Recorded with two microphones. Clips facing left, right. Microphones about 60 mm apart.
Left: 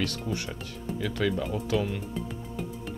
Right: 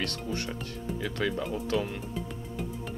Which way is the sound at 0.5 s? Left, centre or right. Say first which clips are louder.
Even; centre.